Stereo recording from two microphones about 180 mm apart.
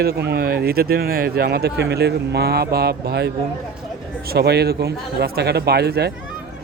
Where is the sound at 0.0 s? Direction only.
65° right (ahead or behind).